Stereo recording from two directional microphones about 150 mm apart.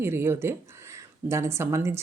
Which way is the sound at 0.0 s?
15° right (ahead or behind).